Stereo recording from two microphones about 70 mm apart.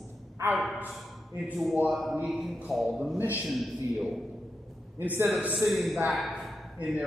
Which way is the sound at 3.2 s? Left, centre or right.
Right.